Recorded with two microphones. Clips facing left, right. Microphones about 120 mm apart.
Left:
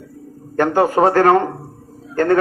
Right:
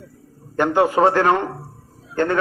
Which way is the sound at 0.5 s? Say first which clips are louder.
Left 2 dB; 45° left (ahead or behind).